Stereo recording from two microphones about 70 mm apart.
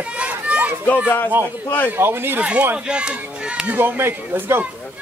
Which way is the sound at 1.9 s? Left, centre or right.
Right.